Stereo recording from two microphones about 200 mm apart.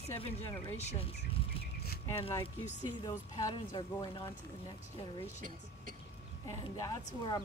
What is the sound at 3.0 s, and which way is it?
Speech, 20° left (ahead or behind).